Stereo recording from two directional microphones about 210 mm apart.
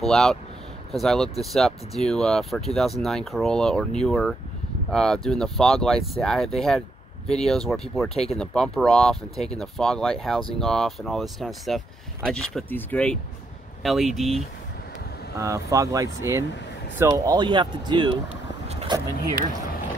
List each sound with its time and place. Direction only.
0.0 s speech: centre (ahead or behind)
15.3 s speech: 15° right (ahead or behind)
18.7 s vehicle: 30° right (ahead or behind)